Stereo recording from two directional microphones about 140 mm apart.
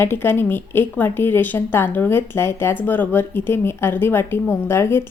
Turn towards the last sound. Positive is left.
turn(degrees=20)  # may be behind; listen again after turning